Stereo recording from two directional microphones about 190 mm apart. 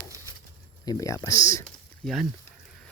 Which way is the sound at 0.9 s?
20° left (ahead or behind).